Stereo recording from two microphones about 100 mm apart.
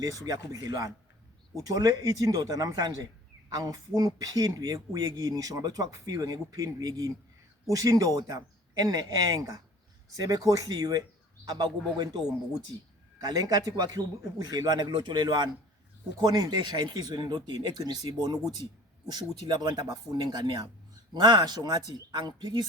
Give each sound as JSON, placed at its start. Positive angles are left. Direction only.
{"t": 0.0, "sound": "speech", "side_deg": -35}
{"t": 13.2, "sound": "speech", "side_deg": -40}